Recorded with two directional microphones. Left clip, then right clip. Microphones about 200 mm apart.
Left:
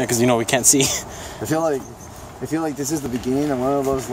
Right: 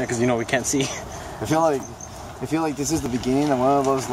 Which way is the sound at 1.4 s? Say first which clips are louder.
Right 1 dB; 15° left (ahead or behind).